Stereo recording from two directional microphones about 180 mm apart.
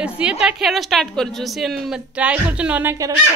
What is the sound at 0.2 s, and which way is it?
A woman's voice, 5° right (ahead or behind).